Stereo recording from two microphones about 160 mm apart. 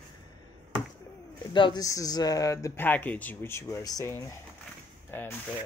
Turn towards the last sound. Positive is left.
turn(degrees=10)  # may be behind; listen again after turning